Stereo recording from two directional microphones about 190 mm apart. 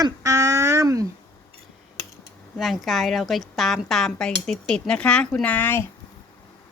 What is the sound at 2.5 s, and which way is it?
Speech, centre (ahead or behind).